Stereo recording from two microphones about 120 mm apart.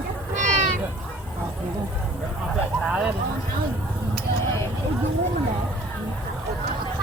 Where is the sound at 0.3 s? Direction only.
90° right.